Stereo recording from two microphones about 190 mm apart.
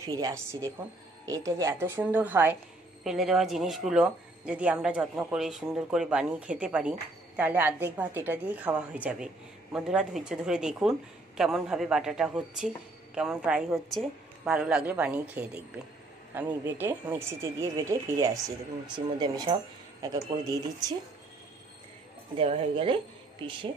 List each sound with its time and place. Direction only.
0.0 s speech: 15° right (ahead or behind)
22.4 s speech: 30° right (ahead or behind)